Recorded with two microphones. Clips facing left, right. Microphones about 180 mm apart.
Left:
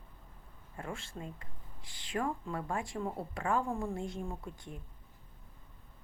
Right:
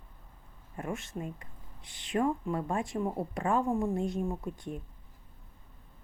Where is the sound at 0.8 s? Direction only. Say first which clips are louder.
Right 6 dB; 20° right (ahead or behind).